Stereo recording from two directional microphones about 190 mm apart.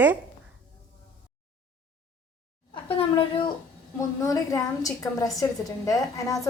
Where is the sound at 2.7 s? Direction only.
30° left (ahead or behind).